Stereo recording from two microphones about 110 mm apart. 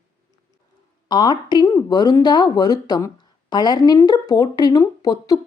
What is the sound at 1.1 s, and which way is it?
Speech, 40° left (ahead or behind).